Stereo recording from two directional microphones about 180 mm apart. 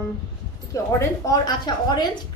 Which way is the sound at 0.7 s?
20° left (ahead or behind).